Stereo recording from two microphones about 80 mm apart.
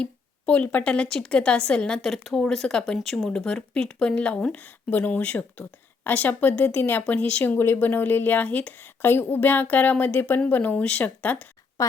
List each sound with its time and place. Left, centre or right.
0.0 s speech: centre
11.8 s a woman's voice: left